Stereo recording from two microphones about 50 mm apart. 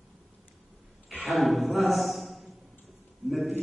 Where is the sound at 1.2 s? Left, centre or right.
Centre.